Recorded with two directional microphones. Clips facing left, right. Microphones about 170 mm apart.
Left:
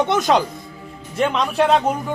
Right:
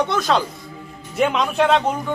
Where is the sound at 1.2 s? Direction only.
5° right (ahead or behind).